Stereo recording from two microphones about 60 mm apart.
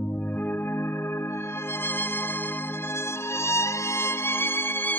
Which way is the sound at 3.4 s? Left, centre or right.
Left.